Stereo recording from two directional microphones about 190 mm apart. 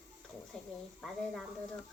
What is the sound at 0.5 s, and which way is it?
Speech, 5° left (ahead or behind).